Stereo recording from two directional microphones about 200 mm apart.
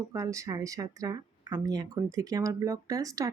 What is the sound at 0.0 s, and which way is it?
Speech, 15° right (ahead or behind).